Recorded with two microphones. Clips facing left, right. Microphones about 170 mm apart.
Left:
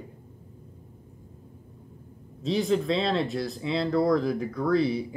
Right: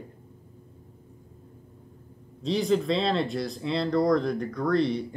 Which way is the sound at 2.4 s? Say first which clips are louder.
Even; centre (ahead or behind).